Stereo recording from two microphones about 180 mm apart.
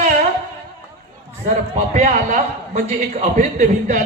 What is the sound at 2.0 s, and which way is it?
Speech, 40° right (ahead or behind).